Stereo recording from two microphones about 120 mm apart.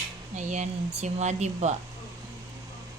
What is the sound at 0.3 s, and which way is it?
Speech, 75° right (ahead or behind).